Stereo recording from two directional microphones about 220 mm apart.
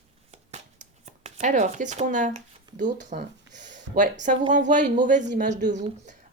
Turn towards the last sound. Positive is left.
turn(degrees=-35)  # may be behind; listen again after turning